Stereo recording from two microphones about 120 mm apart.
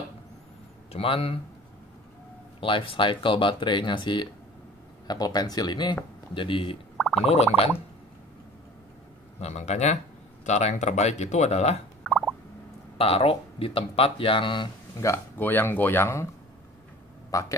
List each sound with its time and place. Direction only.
0.9 s speech: 50° left (ahead or behind)
2.6 s speech: 45° left (ahead or behind)
7.0 s gargling: centre (ahead or behind)
7.2 s speech: 60° left (ahead or behind)
9.4 s speech: 65° left (ahead or behind)
12.0 s a sound: centre (ahead or behind)
12.9 s speech: 55° left (ahead or behind)
15.0 s speech: 20° left (ahead or behind)
17.3 s speech: 25° left (ahead or behind)